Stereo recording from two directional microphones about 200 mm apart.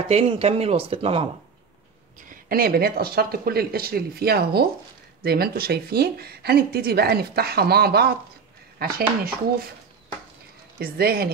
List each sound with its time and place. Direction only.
0.1 s speech: 30° right (ahead or behind)
2.2 s speech: 45° right (ahead or behind)
10.8 s speech: 50° right (ahead or behind)